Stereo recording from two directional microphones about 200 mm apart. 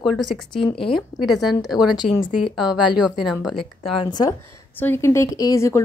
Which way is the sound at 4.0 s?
20° left (ahead or behind).